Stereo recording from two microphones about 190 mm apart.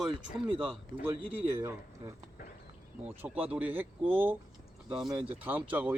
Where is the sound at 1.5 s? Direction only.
15° right (ahead or behind).